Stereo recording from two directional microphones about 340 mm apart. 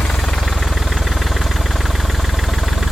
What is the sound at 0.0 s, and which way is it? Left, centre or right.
Engine, centre.